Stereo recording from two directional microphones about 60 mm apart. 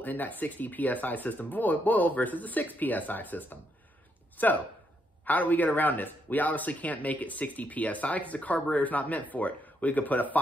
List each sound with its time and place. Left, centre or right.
0.0 s speech: left